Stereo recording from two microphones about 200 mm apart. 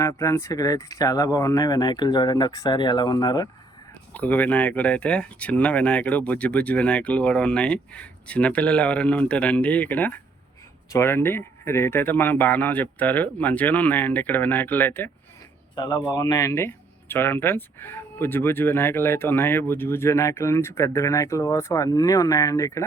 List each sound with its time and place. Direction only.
0.0 s speech: 15° left (ahead or behind)
4.1 s speech: 10° left (ahead or behind)
15.7 s speech: 20° left (ahead or behind)